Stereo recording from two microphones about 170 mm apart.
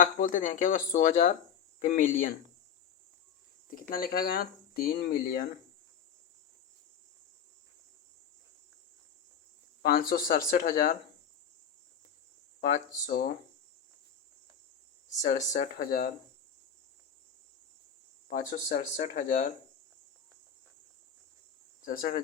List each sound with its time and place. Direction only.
0.0 s speech: 50° left (ahead or behind)
3.8 s speech: 55° left (ahead or behind)
9.8 s speech: 60° left (ahead or behind)
12.5 s a sound: 50° left (ahead or behind)
13.1 s speech: 65° left (ahead or behind)
15.2 s speech: 45° left (ahead or behind)
18.3 s speech: 45° left (ahead or behind)
21.8 s speech: 60° left (ahead or behind)